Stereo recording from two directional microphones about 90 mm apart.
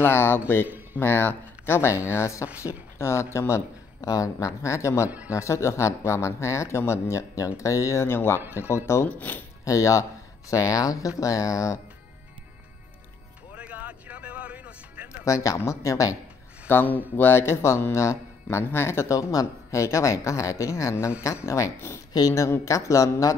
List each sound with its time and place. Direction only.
0.0 s speech: 25° left (ahead or behind)
9.7 s speech: 35° left (ahead or behind)
13.6 s music: 15° right (ahead or behind)
15.2 s speech: 35° left (ahead or behind)
16.6 s speech: 20° left (ahead or behind)